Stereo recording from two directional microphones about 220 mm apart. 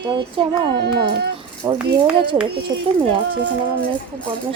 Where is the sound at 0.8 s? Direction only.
45° right (ahead or behind).